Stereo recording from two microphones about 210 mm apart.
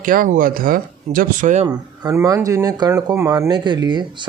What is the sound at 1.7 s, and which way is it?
Speech, 15° right (ahead or behind).